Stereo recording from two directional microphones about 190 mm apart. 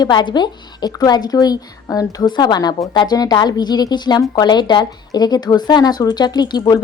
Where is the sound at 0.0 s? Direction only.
25° left (ahead or behind).